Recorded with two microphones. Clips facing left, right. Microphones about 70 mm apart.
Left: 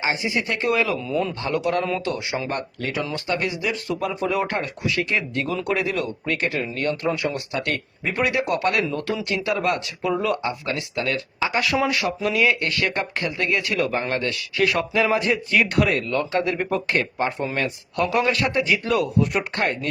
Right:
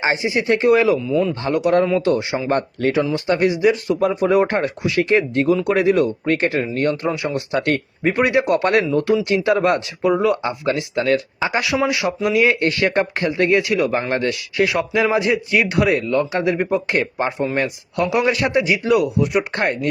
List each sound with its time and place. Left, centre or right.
0.0 s speech: right
1.0 s speech: centre
1.5 s speech: right
2.9 s speech: right
11.6 s a man's voice: centre
12.4 s a man's voice: right; by 19.5 s centre
19.5 s speech: right